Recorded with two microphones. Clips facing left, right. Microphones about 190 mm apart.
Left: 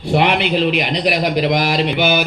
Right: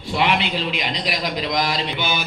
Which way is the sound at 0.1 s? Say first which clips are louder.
Left 6 dB; 60° left (ahead or behind).